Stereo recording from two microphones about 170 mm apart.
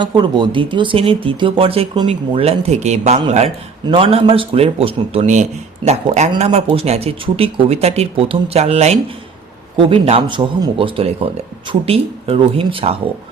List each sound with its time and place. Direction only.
0.0 s a man's voice: 25° right (ahead or behind)